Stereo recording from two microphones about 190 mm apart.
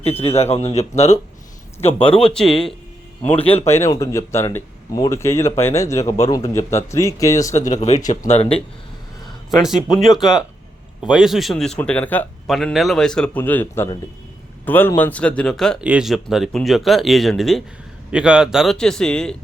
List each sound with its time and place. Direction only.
0.2 s speech: 30° left (ahead or behind)
1.9 s a man's voice: 5° left (ahead or behind)
3.4 s speech: 30° left (ahead or behind)
3.7 s speech: 15° left (ahead or behind)
7.5 s speech: 40° left (ahead or behind)
9.5 s a man's voice: centre (ahead or behind)